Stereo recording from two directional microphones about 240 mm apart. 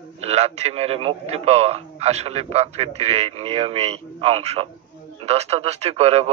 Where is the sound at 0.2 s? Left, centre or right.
Right.